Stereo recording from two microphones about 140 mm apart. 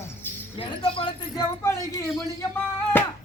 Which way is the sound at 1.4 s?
20° left (ahead or behind).